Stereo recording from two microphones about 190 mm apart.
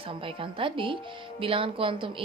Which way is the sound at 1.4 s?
30° right (ahead or behind).